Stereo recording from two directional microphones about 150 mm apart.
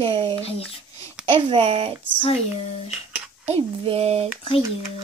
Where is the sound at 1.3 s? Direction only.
40° right (ahead or behind).